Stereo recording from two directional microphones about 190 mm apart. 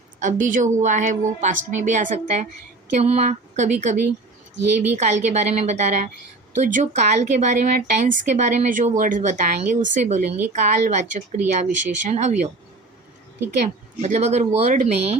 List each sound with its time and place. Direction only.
0.2 s speech: 40° right (ahead or behind)
14.0 s speech: 35° right (ahead or behind)